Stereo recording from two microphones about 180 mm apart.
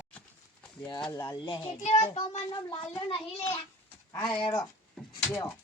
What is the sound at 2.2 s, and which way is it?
A child's voice, 25° left (ahead or behind).